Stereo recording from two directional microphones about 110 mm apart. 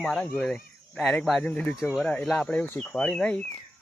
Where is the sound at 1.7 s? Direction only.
Centre (ahead or behind).